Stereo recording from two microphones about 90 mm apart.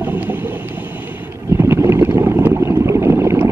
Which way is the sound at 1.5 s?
30° right (ahead or behind).